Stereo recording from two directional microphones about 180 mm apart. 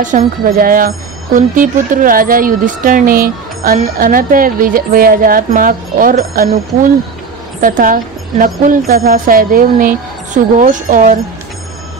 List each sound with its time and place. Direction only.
0.0 s speech: 50° right (ahead or behind)